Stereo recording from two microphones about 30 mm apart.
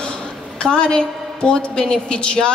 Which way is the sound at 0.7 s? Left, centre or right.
Left.